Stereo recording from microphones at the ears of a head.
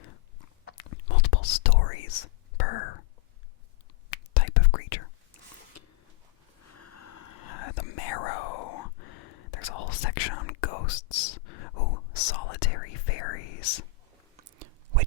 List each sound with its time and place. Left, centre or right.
0.0 s whispering: left
4.1 s whispering: left
6.7 s whispering: left
14.3 s chewing: right